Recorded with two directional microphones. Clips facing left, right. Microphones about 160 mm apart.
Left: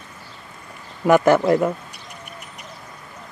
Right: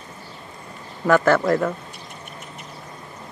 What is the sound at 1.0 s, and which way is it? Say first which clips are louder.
Speech: left 2 dB; 15° left (ahead or behind).